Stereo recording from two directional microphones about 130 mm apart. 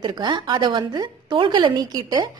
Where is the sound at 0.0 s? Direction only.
35° right (ahead or behind).